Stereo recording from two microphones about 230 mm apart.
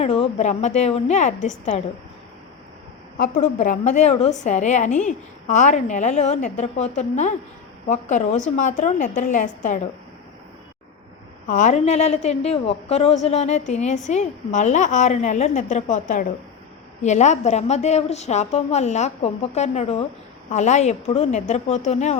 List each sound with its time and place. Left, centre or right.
0.0 s a woman's voice: left
3.2 s a woman's voice: left
11.4 s a woman's voice: left